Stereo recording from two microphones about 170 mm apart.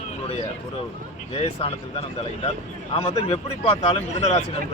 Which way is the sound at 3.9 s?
40° left (ahead or behind).